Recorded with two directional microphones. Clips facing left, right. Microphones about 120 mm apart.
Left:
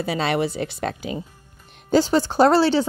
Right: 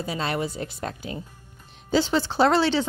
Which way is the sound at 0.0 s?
85° left.